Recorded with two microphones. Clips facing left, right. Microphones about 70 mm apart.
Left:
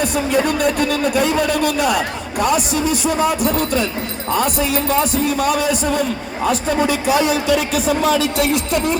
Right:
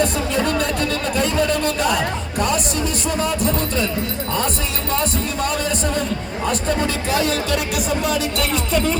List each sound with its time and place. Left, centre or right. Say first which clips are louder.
0.0 s a man's voice: left 2 dB; centre
4.9 s a man's voice: left 2 dB; centre
6.7 s a man's voice: left 4 dB; centre